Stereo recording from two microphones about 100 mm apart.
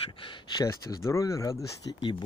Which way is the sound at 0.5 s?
35° left (ahead or behind).